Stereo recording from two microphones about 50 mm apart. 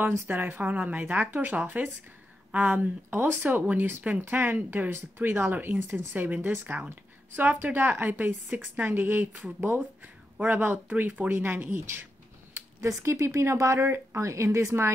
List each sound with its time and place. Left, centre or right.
0.0 s a woman's voice: right
3.1 s a woman's voice: right
7.6 s a woman's voice: right
12.8 s speech: right
13.7 s speech: right